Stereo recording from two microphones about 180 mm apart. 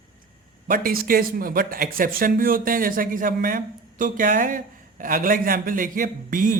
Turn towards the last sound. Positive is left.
turn(degrees=-50)  # may be behind; listen again after turning